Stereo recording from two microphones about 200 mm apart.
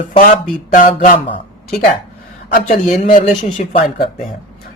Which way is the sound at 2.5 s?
35° left (ahead or behind).